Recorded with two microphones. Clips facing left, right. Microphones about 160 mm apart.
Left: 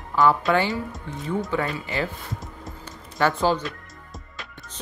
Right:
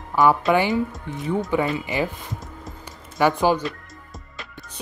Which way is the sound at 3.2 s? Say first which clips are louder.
Right 3 dB; 15° right (ahead or behind).